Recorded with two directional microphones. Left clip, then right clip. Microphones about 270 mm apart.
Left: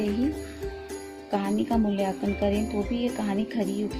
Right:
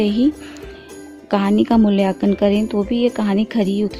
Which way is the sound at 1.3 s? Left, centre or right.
Right.